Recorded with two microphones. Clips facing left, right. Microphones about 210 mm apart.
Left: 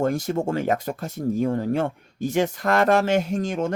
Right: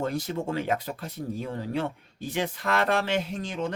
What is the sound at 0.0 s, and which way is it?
Speech, 45° left (ahead or behind).